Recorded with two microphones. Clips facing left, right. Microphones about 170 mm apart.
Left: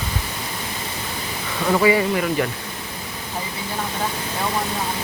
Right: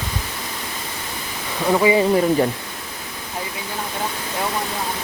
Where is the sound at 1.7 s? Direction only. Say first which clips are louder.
Right 1 dB; 20° right (ahead or behind).